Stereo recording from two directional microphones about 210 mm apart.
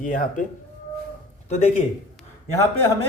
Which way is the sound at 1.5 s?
35° left (ahead or behind).